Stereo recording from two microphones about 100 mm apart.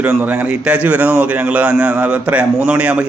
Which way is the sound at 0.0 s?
15° right (ahead or behind).